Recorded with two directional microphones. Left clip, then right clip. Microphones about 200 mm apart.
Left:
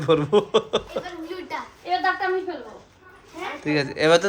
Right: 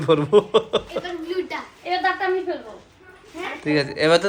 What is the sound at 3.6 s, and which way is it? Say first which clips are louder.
Speech: right 1 dB; 15° left (ahead or behind).